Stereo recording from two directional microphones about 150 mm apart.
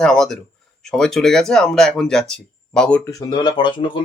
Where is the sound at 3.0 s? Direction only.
25° left (ahead or behind).